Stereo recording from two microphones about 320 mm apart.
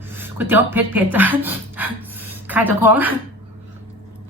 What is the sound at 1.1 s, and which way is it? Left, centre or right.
Music, centre.